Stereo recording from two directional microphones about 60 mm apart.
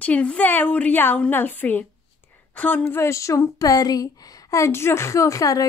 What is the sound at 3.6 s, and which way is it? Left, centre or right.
A woman's voice, left.